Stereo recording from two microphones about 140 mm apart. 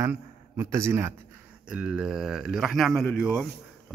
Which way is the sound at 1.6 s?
5° right (ahead or behind).